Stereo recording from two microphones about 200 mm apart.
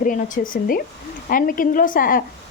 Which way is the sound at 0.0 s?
40° left (ahead or behind).